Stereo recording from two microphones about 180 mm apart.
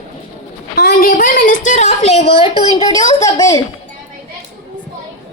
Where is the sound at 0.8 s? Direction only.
50° left (ahead or behind); by 3.6 s 20° left (ahead or behind).